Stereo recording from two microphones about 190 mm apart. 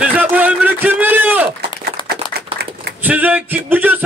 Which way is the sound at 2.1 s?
60° right (ahead or behind).